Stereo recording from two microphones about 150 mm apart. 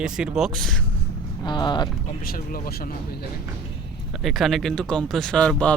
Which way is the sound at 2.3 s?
75° left (ahead or behind).